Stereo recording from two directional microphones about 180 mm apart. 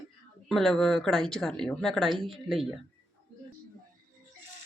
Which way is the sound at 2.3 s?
Centre (ahead or behind).